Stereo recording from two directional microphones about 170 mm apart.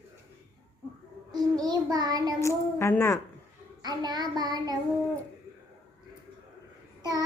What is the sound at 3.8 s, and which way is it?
Child singing, 25° right (ahead or behind).